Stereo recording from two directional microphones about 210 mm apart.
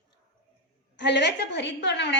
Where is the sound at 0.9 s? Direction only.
55° left (ahead or behind).